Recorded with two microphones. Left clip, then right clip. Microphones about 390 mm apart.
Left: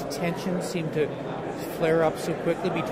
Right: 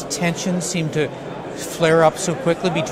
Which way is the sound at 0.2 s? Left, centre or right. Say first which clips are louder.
Right 7 dB; right.